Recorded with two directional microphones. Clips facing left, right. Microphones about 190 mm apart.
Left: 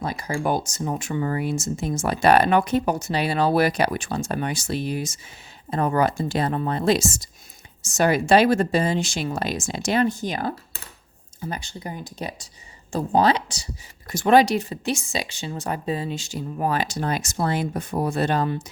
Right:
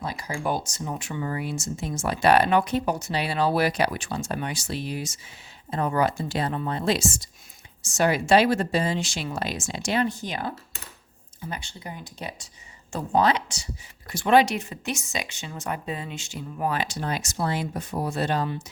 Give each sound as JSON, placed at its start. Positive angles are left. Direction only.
{"t": 0.0, "sound": "speech", "side_deg": 50}